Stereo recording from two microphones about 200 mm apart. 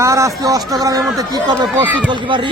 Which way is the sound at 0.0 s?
15° right (ahead or behind).